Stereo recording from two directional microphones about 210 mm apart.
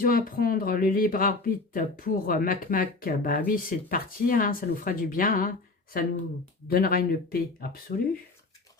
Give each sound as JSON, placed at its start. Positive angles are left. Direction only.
{"t": 0.0, "sound": "speech", "side_deg": 45}
{"t": 6.7, "sound": "speech", "side_deg": 45}